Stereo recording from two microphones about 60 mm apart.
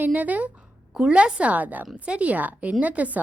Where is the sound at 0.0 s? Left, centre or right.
Right.